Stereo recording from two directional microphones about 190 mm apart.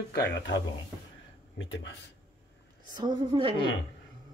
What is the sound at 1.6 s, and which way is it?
Speech, 80° left.